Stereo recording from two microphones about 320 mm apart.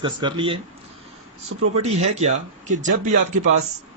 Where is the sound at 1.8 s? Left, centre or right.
Centre.